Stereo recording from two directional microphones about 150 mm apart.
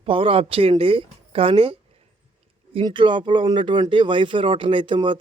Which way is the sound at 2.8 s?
35° right (ahead or behind).